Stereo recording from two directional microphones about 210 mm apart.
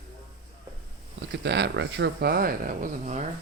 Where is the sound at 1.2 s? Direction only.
55° right (ahead or behind); by 3.2 s 35° right (ahead or behind).